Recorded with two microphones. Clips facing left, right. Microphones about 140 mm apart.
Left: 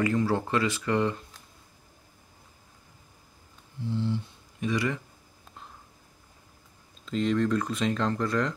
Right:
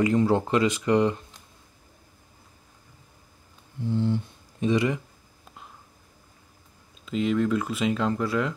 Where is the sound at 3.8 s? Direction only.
50° right (ahead or behind).